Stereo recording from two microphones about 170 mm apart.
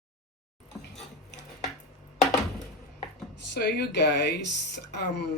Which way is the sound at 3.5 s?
80° left.